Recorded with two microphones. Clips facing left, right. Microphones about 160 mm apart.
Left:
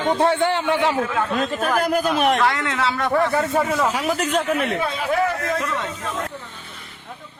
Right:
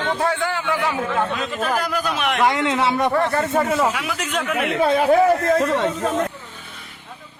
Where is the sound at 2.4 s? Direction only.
20° right (ahead or behind).